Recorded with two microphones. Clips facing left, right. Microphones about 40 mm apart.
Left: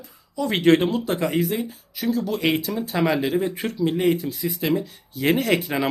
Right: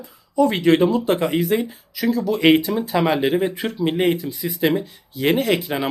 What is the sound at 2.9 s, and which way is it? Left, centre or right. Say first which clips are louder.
Speech: right 3 dB; right.